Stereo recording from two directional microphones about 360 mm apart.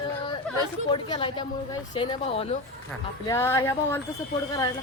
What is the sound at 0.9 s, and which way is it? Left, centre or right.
Speech, centre.